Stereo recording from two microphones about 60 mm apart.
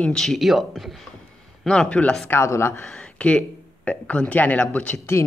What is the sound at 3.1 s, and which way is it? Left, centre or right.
Speech, centre.